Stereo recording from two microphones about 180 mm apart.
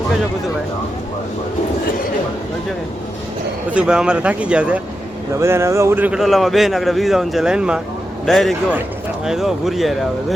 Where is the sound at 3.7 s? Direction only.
5° right (ahead or behind).